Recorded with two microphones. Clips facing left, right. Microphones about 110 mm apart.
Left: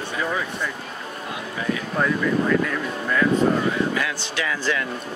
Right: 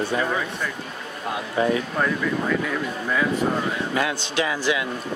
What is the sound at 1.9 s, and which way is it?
Speech, 5° right (ahead or behind).